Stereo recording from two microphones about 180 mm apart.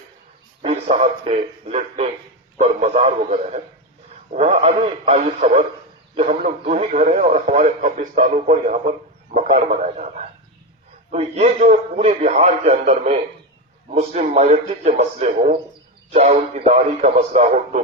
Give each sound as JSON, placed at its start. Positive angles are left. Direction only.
{"t": 0.6, "sound": "speech", "side_deg": -35}